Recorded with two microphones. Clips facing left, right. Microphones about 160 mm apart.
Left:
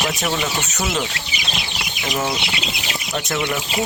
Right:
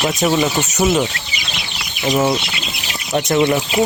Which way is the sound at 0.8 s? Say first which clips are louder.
Right 9 dB; 15° right (ahead or behind).